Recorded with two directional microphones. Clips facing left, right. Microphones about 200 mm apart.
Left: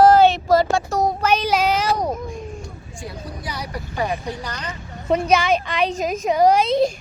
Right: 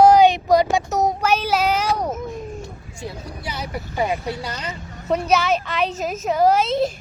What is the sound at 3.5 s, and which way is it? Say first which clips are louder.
Speech: right 2 dB; 20° right (ahead or behind).